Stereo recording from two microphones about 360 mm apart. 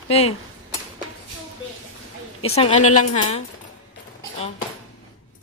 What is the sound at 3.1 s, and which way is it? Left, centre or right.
Speech, centre.